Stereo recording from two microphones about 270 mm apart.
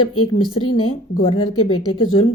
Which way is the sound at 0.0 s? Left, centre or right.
Left.